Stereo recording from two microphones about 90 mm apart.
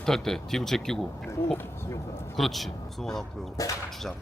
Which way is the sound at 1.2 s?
25° left (ahead or behind).